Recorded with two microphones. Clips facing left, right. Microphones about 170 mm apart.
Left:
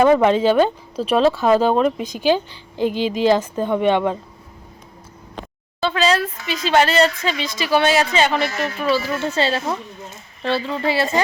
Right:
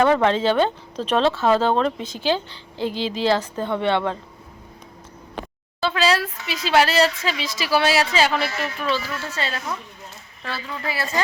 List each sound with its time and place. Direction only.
0.0 s speech: 10° left (ahead or behind)
5.4 s speech: centre (ahead or behind)
8.8 s speech: 10° left (ahead or behind)
9.1 s a woman's voice: 25° left (ahead or behind)